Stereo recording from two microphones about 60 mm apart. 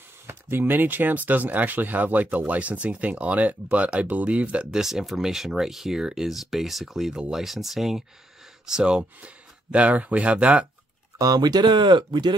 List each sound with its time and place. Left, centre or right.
0.3 s speech: right
4.7 s speech: centre
11.1 s speech: right